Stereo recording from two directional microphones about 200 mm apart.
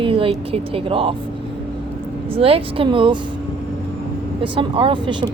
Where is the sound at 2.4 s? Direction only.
30° right (ahead or behind).